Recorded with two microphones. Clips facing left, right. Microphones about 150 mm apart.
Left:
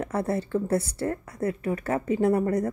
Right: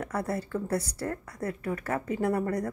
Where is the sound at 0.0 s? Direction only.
25° left (ahead or behind).